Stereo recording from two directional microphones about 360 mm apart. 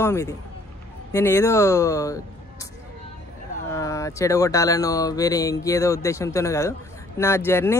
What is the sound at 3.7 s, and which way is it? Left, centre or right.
Speech, centre.